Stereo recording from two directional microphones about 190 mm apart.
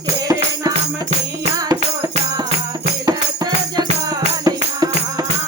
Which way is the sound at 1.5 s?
20° right (ahead or behind).